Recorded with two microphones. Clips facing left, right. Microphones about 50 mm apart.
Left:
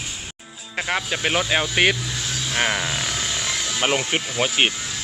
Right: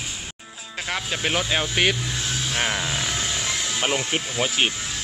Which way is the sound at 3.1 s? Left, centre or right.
Centre.